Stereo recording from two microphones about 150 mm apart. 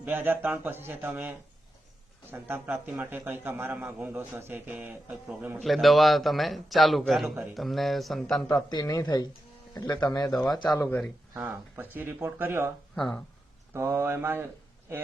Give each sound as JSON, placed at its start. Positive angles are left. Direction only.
{"t": 0.0, "sound": "a man's voice", "side_deg": -15}
{"t": 2.3, "sound": "a man's voice", "side_deg": -15}
{"t": 8.4, "sound": "speech", "side_deg": 25}
{"t": 10.8, "sound": "a man's voice", "side_deg": 10}
{"t": 11.3, "sound": "a man's voice", "side_deg": -10}
{"t": 13.7, "sound": "a man's voice", "side_deg": -15}